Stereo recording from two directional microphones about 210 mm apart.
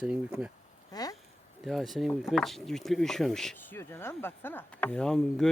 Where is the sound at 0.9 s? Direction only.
20° left (ahead or behind).